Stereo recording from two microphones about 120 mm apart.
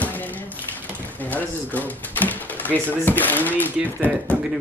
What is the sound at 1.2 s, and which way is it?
Speech, 15° left (ahead or behind).